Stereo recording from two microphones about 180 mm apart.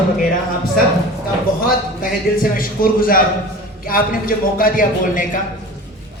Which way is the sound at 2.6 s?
50° left (ahead or behind).